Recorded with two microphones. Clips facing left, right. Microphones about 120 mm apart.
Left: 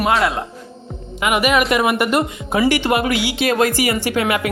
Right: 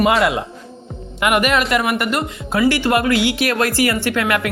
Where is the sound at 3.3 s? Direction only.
20° left (ahead or behind).